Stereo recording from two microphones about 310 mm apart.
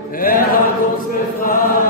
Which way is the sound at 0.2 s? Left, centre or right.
Left.